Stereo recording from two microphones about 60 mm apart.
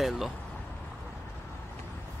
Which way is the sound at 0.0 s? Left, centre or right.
Centre.